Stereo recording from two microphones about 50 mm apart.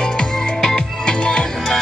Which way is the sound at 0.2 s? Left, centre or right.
Centre.